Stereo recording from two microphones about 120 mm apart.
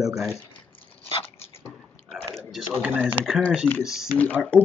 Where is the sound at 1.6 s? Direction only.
Centre (ahead or behind).